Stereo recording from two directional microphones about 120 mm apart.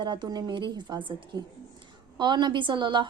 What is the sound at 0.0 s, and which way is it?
A woman's voice, 40° right (ahead or behind).